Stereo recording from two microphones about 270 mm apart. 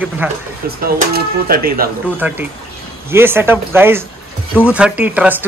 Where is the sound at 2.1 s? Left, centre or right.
Centre.